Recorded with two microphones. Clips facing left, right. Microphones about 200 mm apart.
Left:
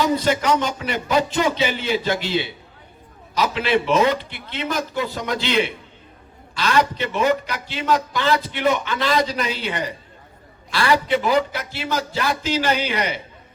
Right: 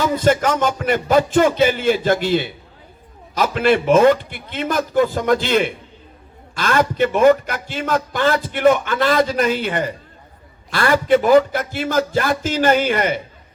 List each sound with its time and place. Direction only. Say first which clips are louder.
0.0 s a man's voice: right 3 dB; 50° right (ahead or behind)